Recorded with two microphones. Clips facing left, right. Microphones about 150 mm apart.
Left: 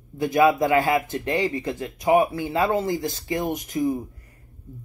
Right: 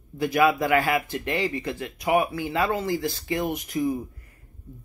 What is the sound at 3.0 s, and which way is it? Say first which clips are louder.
Speech: left 1 dB; 45° left (ahead or behind).